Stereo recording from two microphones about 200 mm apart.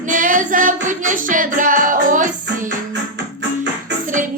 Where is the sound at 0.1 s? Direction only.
40° right (ahead or behind).